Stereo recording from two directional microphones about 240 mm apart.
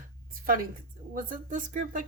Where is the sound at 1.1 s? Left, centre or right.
Right.